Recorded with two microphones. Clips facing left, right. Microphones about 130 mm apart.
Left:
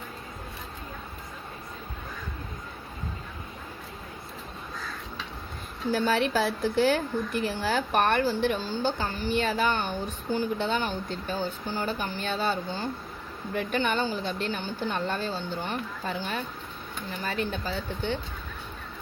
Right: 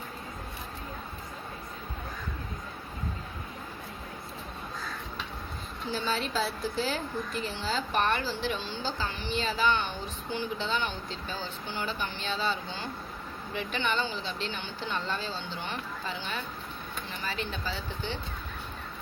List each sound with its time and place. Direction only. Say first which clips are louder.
5.9 s a woman's voice: left 7 dB; 60° left (ahead or behind)